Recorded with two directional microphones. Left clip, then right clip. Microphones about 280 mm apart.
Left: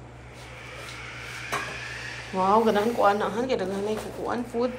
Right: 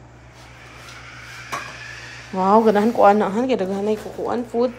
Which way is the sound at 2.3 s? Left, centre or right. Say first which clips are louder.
Right 6 dB; right.